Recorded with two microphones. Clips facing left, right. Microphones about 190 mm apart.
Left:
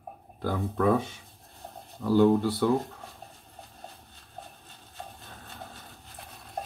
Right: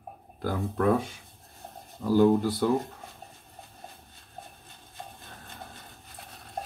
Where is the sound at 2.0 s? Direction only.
15° right (ahead or behind).